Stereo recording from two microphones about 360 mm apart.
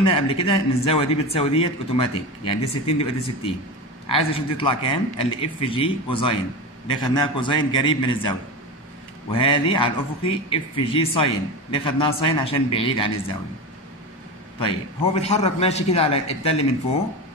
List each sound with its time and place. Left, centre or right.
0.0 s a man's voice: centre
14.6 s a man's voice: centre